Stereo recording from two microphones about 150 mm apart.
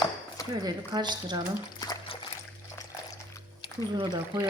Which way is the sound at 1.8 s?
30° left (ahead or behind).